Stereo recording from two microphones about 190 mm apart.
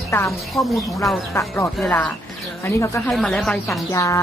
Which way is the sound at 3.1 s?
Centre (ahead or behind).